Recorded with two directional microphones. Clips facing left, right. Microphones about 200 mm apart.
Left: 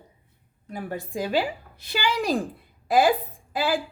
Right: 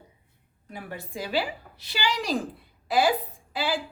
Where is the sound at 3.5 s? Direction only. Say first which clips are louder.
Left 4 dB; 50° left (ahead or behind).